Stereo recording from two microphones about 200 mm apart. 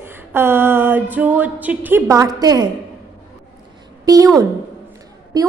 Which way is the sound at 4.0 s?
20° right (ahead or behind).